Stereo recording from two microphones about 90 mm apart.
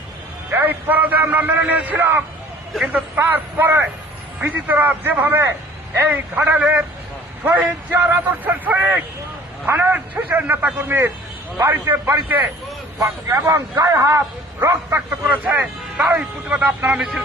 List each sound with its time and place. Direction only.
0.5 s a man's voice: 20° right (ahead or behind)
13.0 s speech: 40° right (ahead or behind)
13.4 s a man's voice: 25° right (ahead or behind)
16.0 s speech: 10° right (ahead or behind)
16.5 s speech: 20° right (ahead or behind)